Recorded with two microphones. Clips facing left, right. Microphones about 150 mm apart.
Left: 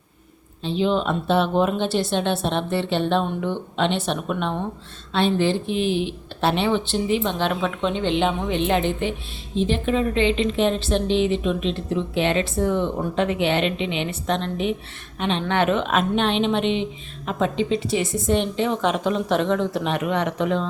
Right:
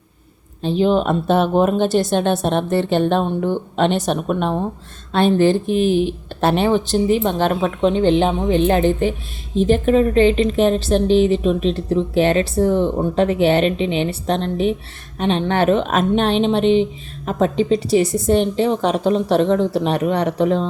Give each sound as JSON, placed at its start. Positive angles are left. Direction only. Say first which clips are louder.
{"t": 0.6, "sound": "a woman's voice", "louder": "right 5 dB", "side_deg": -45}